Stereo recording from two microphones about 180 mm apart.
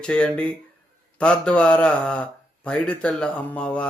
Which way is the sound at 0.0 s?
5° left (ahead or behind).